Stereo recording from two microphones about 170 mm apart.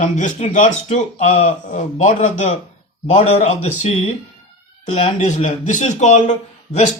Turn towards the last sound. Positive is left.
turn(degrees=45)  # may be behind; listen again after turning